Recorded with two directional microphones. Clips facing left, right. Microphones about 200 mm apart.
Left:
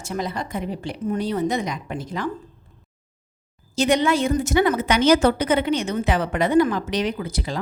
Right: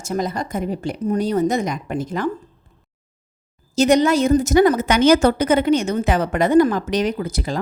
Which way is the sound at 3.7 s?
40° right (ahead or behind).